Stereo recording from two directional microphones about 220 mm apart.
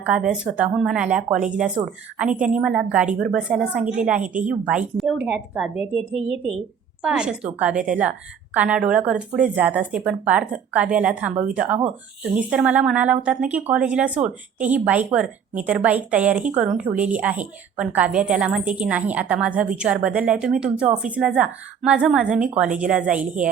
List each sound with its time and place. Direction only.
0.0 s speech: 5° right (ahead or behind)
6.1 s a woman's voice: 25° left (ahead or behind)
7.0 s speech: 5° right (ahead or behind)